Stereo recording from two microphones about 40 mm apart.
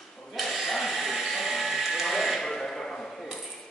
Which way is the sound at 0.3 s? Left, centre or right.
Centre.